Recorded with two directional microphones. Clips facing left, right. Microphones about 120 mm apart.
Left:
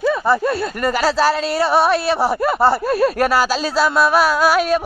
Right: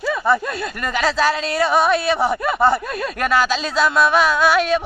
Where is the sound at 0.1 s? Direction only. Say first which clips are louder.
Left 2 dB; 5° left (ahead or behind).